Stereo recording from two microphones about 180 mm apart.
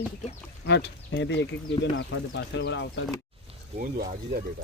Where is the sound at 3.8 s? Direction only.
55° right (ahead or behind).